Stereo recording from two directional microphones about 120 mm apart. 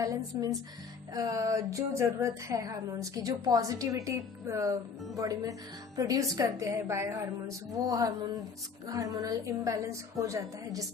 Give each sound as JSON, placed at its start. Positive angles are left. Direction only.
{"t": 0.3, "sound": "a woman's voice", "side_deg": -25}
{"t": 7.9, "sound": "a sound", "side_deg": -30}
{"t": 8.9, "sound": "a woman's voice", "side_deg": -30}